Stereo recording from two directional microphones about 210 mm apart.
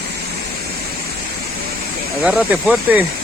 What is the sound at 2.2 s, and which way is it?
Speech, 5° right (ahead or behind).